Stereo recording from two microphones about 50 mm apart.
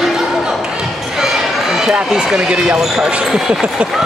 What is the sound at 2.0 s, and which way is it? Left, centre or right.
Speech, centre.